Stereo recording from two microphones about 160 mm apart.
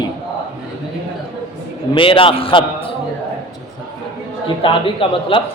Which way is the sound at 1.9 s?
35° left (ahead or behind).